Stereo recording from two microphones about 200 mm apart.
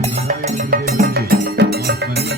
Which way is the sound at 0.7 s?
50° right (ahead or behind).